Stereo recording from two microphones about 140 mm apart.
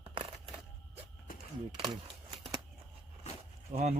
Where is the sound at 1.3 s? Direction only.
90° left.